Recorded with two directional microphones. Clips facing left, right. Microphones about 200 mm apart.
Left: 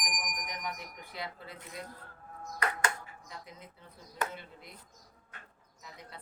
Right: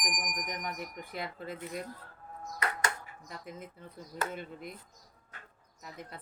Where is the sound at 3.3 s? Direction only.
50° right (ahead or behind).